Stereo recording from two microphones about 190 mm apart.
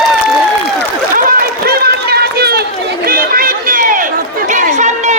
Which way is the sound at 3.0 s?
50° right (ahead or behind).